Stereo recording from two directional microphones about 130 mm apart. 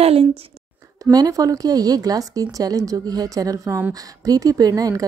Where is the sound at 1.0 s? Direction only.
30° right (ahead or behind).